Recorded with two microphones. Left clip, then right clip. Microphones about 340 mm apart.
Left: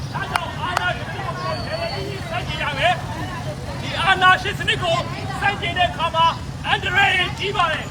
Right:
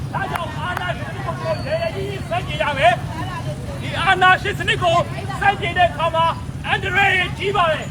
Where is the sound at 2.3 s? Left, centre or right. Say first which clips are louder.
Right 4 dB; centre.